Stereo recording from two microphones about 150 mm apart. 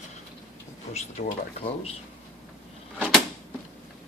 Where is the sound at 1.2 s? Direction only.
75° left (ahead or behind).